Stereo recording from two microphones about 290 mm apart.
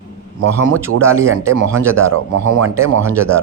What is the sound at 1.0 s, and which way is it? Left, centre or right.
Speech, centre.